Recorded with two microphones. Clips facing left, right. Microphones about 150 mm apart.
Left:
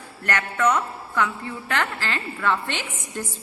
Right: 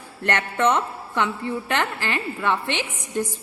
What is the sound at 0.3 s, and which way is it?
A woman's voice, 25° right (ahead or behind).